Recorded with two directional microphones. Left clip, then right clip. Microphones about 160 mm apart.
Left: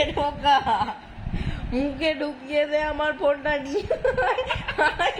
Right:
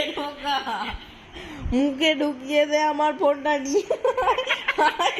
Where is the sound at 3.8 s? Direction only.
25° right (ahead or behind).